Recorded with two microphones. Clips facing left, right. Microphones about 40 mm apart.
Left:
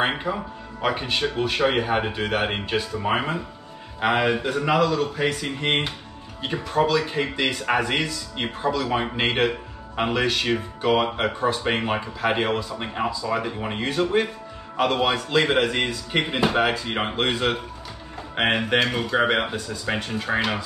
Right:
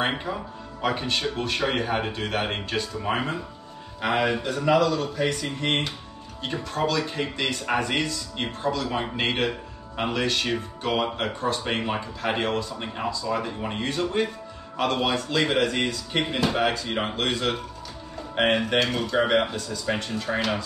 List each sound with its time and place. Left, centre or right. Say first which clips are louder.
0.1 s speech: left 3 dB; centre